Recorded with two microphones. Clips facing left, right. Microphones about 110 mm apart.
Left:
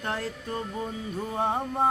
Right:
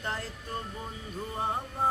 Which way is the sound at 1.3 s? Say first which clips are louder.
Left 6 dB; 90° left.